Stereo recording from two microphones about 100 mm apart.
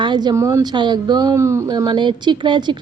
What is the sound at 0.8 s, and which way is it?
Speech, 45° right (ahead or behind).